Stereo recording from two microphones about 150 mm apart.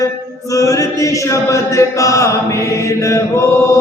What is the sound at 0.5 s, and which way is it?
Chant, 20° left (ahead or behind).